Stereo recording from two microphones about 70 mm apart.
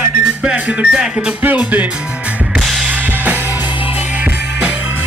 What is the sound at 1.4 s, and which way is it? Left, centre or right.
Music, right.